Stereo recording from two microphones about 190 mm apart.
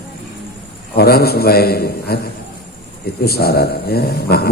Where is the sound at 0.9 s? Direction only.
55° left (ahead or behind).